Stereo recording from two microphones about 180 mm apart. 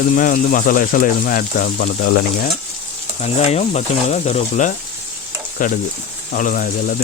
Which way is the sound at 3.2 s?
35° left (ahead or behind).